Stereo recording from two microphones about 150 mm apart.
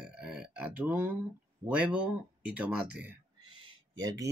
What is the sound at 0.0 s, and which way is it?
Burping, 5° right (ahead or behind).